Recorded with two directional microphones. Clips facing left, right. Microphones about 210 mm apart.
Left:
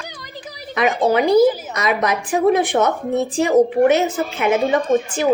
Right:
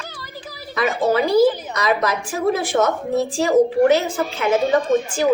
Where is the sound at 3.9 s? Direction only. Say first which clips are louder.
Left 2 dB; 20° left (ahead or behind).